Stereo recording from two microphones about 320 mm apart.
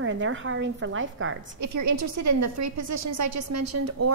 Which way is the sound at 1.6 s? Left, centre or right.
Right.